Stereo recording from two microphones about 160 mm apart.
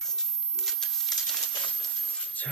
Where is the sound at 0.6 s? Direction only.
Centre (ahead or behind).